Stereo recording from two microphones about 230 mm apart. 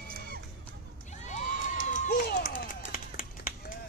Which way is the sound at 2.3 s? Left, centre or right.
Left.